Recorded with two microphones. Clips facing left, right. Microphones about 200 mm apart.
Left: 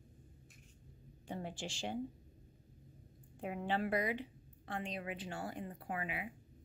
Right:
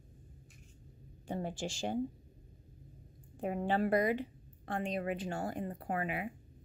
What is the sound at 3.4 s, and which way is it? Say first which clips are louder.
A woman's voice: right 5 dB; 40° right (ahead or behind).